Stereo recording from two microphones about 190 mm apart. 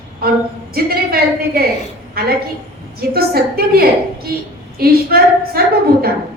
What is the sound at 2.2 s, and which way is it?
A woman's voice, 55° right (ahead or behind).